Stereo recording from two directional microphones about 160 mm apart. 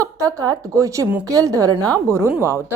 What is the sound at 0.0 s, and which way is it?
A woman's voice, 20° right (ahead or behind).